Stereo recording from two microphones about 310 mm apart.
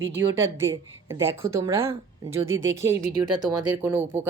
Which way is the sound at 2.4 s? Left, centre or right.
Right.